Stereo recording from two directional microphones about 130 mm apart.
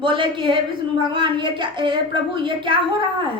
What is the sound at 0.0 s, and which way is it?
A woman's voice, 40° right (ahead or behind).